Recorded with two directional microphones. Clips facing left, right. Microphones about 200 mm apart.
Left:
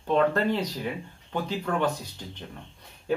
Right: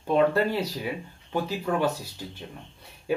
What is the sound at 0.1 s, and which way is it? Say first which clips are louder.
Speech: right 1 dB; 10° right (ahead or behind).